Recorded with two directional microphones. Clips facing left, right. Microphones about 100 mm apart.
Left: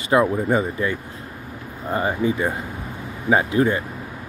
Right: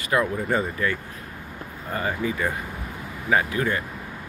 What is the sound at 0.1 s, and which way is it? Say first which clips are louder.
Speech: left 5 dB; 20° left (ahead or behind).